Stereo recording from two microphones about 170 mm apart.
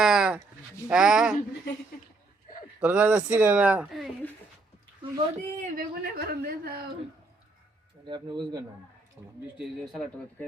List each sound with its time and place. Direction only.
0.0 s a sound: 5° right (ahead or behind)
0.9 s speech: 5° right (ahead or behind)
2.8 s speech: 10° right (ahead or behind)
5.5 s speech: 50° right (ahead or behind)
8.0 s speech: 25° right (ahead or behind)
9.6 s speech: centre (ahead or behind)